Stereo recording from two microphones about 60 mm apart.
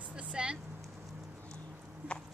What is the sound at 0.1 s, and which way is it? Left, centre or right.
Vehicle, centre.